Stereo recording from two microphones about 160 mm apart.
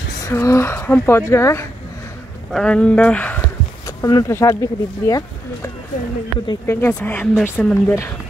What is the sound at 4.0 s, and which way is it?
Speech, 20° left (ahead or behind).